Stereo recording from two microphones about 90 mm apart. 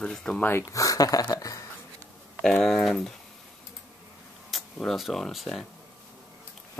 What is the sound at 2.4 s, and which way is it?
Speech, 5° left (ahead or behind).